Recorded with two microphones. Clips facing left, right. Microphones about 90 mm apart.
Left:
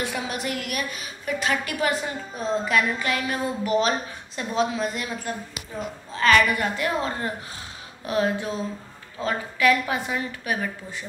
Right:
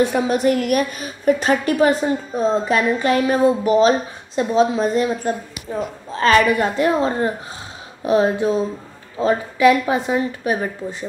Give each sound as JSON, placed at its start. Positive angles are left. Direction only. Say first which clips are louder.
{"t": 0.0, "sound": "a woman's voice", "louder": "right 12 dB", "side_deg": -35}